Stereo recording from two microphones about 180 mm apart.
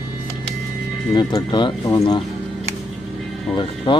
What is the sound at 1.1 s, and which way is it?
Speech, 20° left (ahead or behind).